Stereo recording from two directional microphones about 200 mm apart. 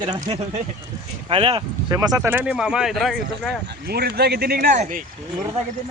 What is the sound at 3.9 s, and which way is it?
Speech, 55° right (ahead or behind).